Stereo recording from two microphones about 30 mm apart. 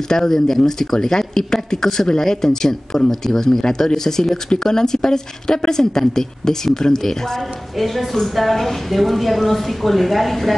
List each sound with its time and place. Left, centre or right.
0.1 s speech: centre
7.8 s a woman's voice: centre